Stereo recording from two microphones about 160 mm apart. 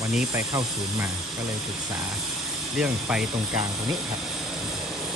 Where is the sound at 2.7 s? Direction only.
5° right (ahead or behind).